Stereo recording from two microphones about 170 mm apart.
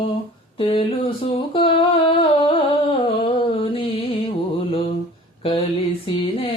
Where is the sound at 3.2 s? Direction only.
30° left (ahead or behind).